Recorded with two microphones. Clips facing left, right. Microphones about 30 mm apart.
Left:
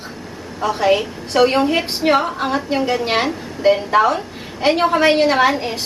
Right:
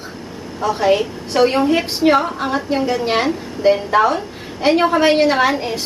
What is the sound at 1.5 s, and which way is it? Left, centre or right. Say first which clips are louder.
Speech: right 1 dB; left.